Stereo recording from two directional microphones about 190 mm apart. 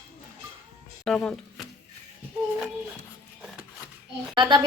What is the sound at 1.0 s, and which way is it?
Speech, 5° left (ahead or behind).